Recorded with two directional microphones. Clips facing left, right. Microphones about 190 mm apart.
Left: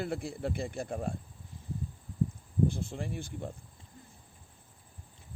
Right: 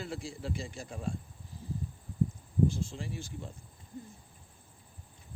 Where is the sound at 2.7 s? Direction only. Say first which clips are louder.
Left 1 dB; 55° left (ahead or behind).